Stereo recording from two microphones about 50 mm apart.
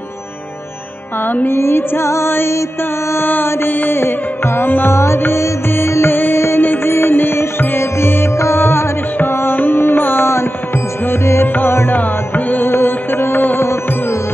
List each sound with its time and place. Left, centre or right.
1.3 s music: left
1.6 s music: left
3.2 s mantra: left
4.9 s music: left
6.1 s music: left
11.9 s music: left